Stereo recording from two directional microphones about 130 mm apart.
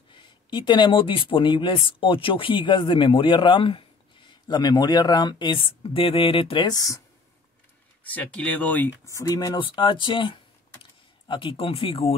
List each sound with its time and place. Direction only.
0.1 s speech: 40° left (ahead or behind)
6.7 s speech: 25° left (ahead or behind)
8.0 s speech: 10° left (ahead or behind); by 12.2 s 45° left (ahead or behind)